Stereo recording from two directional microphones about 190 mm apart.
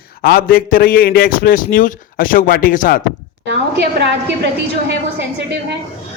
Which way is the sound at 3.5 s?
65° right (ahead or behind).